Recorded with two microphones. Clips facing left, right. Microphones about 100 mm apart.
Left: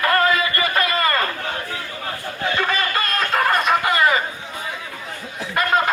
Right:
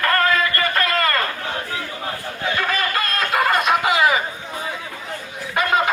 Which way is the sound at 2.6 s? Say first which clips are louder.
Even; centre (ahead or behind).